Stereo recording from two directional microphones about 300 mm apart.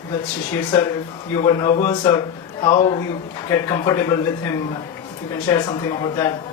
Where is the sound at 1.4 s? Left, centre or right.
Centre.